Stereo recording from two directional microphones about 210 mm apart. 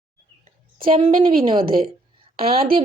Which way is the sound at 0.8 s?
25° right (ahead or behind).